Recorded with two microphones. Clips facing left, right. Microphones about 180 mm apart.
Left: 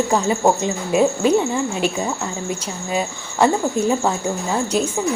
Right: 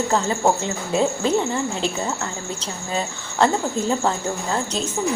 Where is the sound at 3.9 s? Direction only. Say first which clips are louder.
Left 2 dB; 15° left (ahead or behind).